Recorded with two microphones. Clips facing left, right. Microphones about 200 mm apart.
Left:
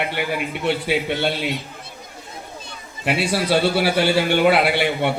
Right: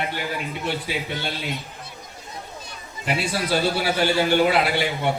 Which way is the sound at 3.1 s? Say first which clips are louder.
Left 4 dB; 65° left (ahead or behind).